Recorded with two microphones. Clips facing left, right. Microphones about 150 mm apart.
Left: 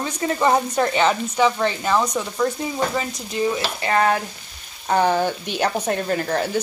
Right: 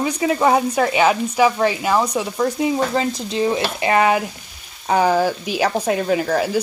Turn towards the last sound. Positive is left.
turn(degrees=-5)  # may be behind; listen again after turning